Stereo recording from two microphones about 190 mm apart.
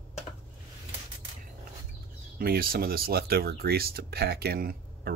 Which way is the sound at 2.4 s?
50° right (ahead or behind).